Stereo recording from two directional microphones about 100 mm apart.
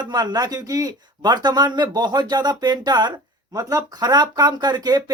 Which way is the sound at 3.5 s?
35° right (ahead or behind).